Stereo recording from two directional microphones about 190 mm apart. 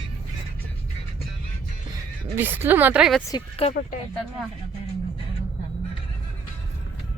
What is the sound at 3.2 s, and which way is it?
Speech, 25° left (ahead or behind).